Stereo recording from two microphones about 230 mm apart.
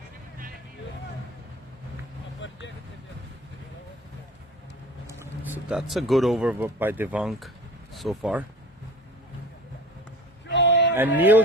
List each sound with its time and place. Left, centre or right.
2.4 s vehicle: left
5.5 s speech: centre
10.5 s a sound: left
10.9 s speech: centre